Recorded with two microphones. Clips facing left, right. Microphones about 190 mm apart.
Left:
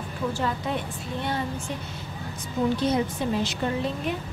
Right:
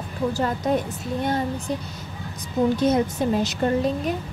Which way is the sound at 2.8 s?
45° right (ahead or behind).